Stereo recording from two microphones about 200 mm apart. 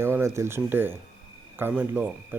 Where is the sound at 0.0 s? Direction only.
15° right (ahead or behind).